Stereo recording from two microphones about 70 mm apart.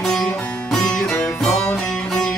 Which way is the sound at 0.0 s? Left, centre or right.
Centre.